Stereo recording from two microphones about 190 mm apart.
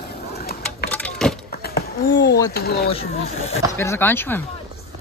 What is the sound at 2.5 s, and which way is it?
Speech, 55° left (ahead or behind).